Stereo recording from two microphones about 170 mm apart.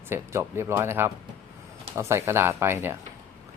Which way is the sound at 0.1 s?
15° right (ahead or behind).